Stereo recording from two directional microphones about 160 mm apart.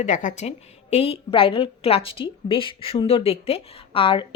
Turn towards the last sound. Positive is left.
turn(degrees=35)  # may be behind; listen again after turning